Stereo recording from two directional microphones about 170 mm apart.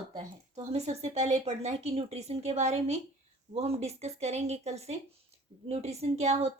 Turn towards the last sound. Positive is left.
turn(degrees=-40)  # may be behind; listen again after turning